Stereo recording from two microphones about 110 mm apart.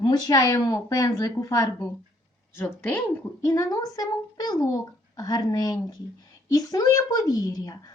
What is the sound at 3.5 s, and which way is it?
A woman's voice, 30° left (ahead or behind).